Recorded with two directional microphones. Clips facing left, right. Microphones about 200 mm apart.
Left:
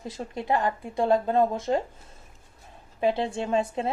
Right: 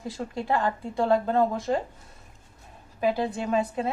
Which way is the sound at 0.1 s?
20° left (ahead or behind).